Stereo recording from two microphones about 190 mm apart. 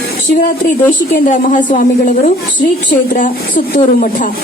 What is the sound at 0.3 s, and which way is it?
A woman's voice, 45° left (ahead or behind).